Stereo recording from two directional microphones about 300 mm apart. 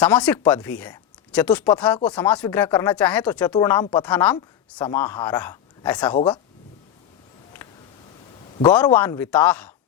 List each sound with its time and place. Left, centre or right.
0.0 s a woman's voice: centre
6.1 s a woman's voice: centre
8.6 s speech: centre